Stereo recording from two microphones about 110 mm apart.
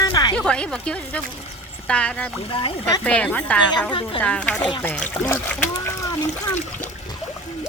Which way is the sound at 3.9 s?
50° left (ahead or behind).